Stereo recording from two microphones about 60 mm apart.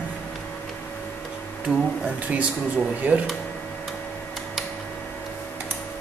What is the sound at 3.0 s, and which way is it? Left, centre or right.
Speech, right.